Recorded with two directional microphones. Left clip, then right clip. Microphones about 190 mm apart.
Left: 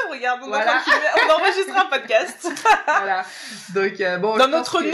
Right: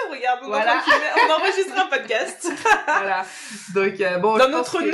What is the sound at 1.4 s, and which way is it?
Speech, 40° left (ahead or behind).